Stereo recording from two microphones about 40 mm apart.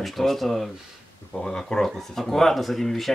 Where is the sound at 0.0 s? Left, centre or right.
Centre.